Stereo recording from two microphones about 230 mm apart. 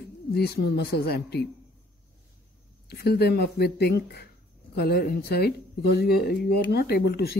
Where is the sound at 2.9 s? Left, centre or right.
Left.